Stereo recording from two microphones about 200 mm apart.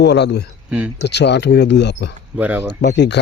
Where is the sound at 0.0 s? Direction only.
55° left (ahead or behind).